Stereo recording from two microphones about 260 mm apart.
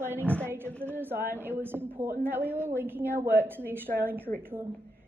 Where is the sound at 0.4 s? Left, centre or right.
Centre.